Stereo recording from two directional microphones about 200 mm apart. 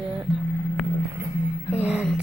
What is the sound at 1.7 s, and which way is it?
Music, 5° right (ahead or behind).